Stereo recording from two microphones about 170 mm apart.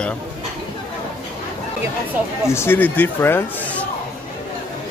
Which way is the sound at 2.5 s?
15° left (ahead or behind).